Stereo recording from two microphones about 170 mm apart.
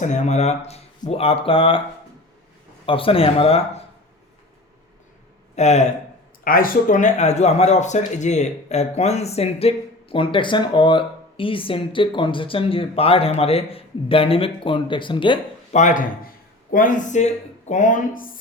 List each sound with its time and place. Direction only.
0.0 s speech: 45° left (ahead or behind)
2.8 s speech: 30° left (ahead or behind)
5.5 s speech: 40° left (ahead or behind)
6.4 s speech: 55° left (ahead or behind); by 15.4 s 30° left (ahead or behind)
15.7 s speech: 45° left (ahead or behind)